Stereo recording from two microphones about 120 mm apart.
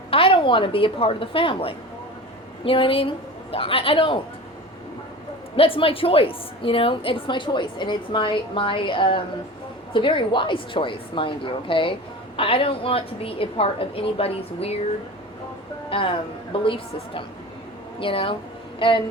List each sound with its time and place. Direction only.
0.1 s a woman's voice: 50° left (ahead or behind)
5.5 s a woman's voice: 50° left (ahead or behind)
15.9 s a woman's voice: 45° left (ahead or behind)